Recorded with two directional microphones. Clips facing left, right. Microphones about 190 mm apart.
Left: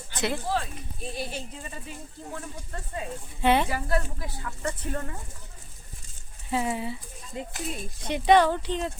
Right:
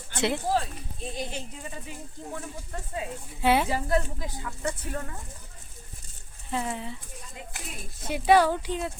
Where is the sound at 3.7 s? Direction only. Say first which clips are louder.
Right 2 dB; 20° right (ahead or behind); by 5.1 s centre (ahead or behind).